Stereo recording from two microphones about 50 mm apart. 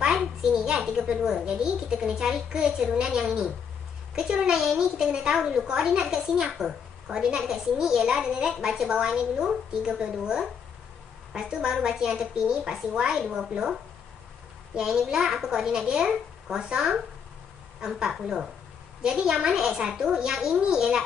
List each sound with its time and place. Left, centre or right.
0.4 s a child's voice: centre
4.6 s a woman's voice: centre
14.9 s a woman's voice: centre